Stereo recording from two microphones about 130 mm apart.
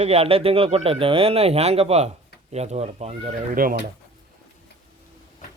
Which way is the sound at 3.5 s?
90° right.